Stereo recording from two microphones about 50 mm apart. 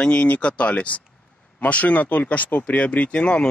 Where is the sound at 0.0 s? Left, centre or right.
Centre.